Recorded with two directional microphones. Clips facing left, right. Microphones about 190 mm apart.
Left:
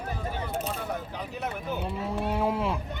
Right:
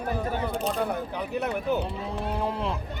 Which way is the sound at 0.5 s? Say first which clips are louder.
Right 4 dB; 35° right (ahead or behind).